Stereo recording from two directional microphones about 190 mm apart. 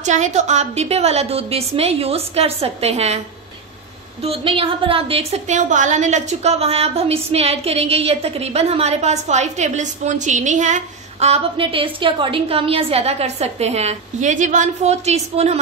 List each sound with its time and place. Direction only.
0.0 s a woman's voice: 40° right (ahead or behind)
4.2 s a woman's voice: 30° right (ahead or behind)